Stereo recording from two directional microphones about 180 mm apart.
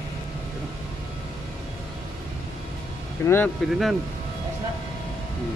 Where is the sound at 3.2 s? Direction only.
15° left (ahead or behind).